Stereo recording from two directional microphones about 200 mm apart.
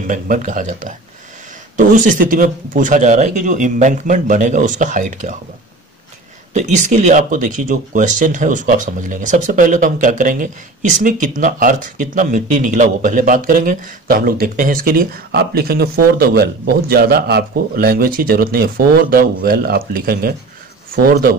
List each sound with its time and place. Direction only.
0.0 s speech: 40° right (ahead or behind)
6.5 s speech: 35° right (ahead or behind)